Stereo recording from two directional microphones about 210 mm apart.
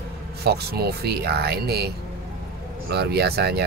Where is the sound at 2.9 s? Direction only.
50° right (ahead or behind).